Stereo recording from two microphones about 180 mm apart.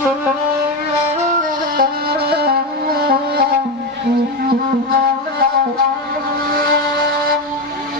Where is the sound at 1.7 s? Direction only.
60° right (ahead or behind).